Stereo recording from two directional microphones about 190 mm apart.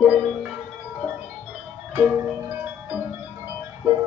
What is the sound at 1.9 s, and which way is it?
Music, 10° right (ahead or behind).